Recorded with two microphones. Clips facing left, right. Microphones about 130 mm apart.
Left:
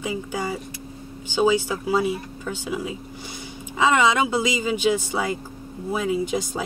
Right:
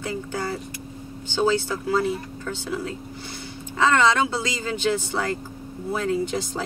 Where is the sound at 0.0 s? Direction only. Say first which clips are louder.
Left 1 dB; 10° left (ahead or behind).